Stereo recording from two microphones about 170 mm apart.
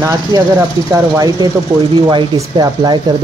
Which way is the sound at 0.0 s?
20° right (ahead or behind).